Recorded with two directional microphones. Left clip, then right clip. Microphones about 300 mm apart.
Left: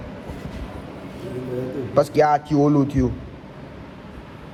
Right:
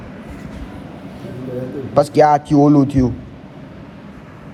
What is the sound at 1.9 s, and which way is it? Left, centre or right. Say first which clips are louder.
Speech: right 5 dB; centre.